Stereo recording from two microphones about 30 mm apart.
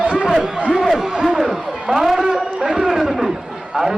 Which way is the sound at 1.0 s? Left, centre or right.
Right.